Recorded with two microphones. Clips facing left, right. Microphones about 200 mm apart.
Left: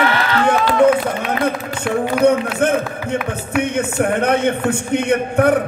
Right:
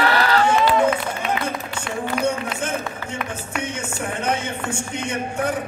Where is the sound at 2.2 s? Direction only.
60° left (ahead or behind).